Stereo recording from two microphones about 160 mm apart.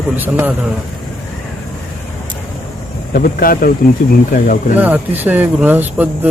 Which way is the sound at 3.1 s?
65° left (ahead or behind).